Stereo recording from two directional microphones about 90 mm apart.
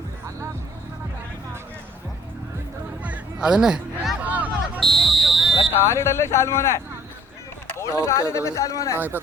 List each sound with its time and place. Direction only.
3.0 s music: 10° right (ahead or behind)
4.2 s music: 15° right (ahead or behind)
4.8 s a sound: centre (ahead or behind)
5.7 s speech: 30° left (ahead or behind)